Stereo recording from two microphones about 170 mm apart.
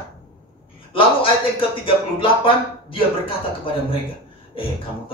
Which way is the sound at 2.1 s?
30° left (ahead or behind).